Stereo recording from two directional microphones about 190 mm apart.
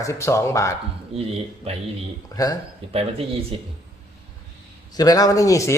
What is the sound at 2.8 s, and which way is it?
Speech, 30° right (ahead or behind).